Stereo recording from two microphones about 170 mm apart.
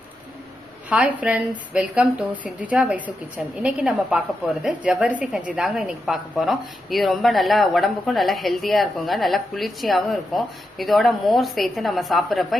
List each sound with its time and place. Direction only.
0.9 s a woman's voice: 10° right (ahead or behind)